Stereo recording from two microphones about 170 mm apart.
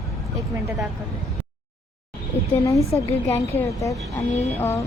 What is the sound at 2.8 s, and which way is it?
Speech, 35° left (ahead or behind).